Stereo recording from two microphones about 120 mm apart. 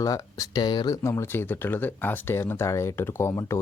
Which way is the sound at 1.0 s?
20° left (ahead or behind).